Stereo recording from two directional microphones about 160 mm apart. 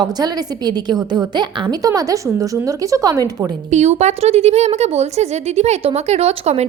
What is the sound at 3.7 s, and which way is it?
A woman's voice, 45° right (ahead or behind).